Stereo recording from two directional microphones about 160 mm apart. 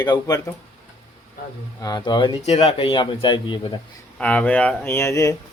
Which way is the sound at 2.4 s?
40° left (ahead or behind).